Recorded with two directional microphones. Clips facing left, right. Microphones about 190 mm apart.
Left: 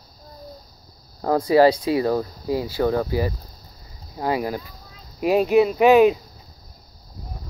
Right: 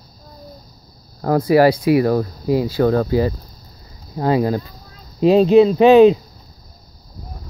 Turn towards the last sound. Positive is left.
turn(degrees=-25)  # may be behind; listen again after turning